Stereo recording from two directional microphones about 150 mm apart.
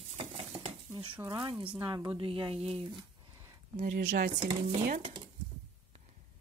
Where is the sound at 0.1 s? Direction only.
45° right (ahead or behind).